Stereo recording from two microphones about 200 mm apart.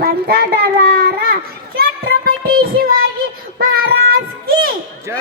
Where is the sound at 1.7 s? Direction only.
50° right (ahead or behind).